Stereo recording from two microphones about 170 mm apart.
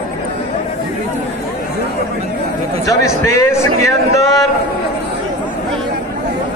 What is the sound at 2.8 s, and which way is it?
A man's voice, 20° left (ahead or behind).